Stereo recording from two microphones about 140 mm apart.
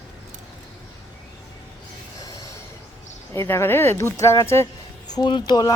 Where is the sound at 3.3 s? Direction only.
15° left (ahead or behind).